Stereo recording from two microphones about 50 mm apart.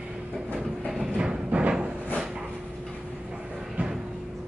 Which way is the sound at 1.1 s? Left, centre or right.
Centre.